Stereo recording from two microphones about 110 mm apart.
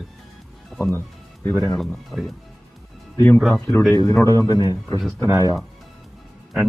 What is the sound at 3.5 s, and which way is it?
Speech, 15° left (ahead or behind).